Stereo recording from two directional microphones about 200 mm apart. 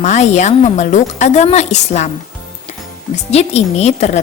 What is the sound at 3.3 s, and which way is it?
Speech, 35° left (ahead or behind).